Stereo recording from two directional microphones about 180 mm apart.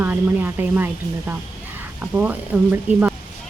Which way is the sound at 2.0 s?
10° right (ahead or behind).